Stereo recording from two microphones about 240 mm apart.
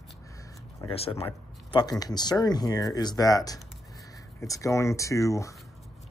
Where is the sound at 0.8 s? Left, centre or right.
Left.